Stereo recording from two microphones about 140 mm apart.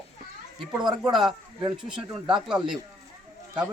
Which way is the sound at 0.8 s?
30° right (ahead or behind).